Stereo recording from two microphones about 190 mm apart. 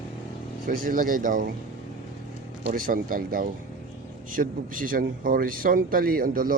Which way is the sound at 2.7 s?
50° right (ahead or behind).